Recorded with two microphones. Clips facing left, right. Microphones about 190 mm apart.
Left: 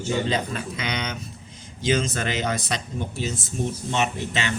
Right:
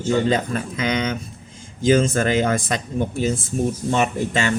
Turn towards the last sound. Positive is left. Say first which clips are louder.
# right 6 dB
turn(degrees=-45)  # may be behind; listen again after turning